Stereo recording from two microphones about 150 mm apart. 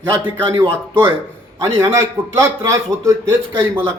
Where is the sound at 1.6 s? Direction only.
20° right (ahead or behind).